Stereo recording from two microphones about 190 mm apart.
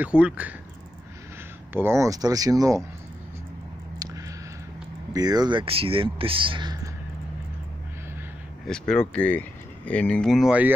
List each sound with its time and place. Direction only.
0.0 s speech: 5° right (ahead or behind)
1.7 s speech: 10° right (ahead or behind)
5.1 s speech: 20° right (ahead or behind)
8.6 s speech: 5° left (ahead or behind)